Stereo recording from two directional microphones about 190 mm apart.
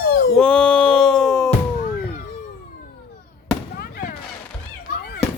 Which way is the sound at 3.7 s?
50° left (ahead or behind).